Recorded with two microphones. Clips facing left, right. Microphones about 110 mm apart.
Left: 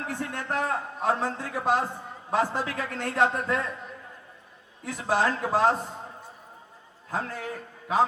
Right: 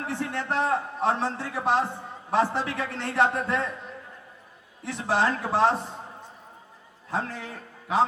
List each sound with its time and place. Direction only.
0.1 s a man's voice: 20° right (ahead or behind)
4.9 s a man's voice: 20° right (ahead or behind)
7.1 s a man's voice: 25° right (ahead or behind)